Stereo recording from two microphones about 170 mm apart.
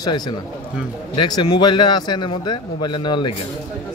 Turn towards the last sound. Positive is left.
turn(degrees=25)  # may be behind; listen again after turning